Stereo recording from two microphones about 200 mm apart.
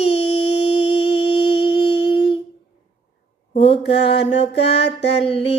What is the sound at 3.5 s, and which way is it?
Mantra, 30° left (ahead or behind).